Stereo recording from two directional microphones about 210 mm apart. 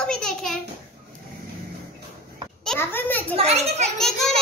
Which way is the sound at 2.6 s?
5° left (ahead or behind).